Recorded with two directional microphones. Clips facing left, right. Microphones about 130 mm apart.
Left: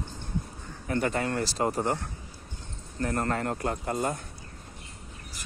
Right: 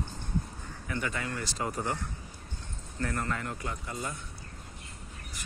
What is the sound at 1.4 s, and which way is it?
Speech, 35° left (ahead or behind).